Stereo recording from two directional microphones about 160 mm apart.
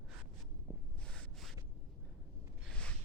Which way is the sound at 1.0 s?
5° left (ahead or behind).